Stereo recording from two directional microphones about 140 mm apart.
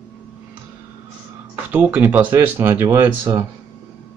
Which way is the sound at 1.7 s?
10° right (ahead or behind).